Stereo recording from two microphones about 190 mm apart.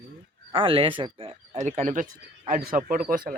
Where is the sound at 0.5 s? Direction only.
30° right (ahead or behind); by 3.4 s 50° right (ahead or behind).